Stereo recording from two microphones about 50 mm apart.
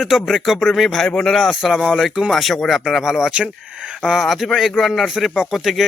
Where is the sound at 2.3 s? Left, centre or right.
Centre.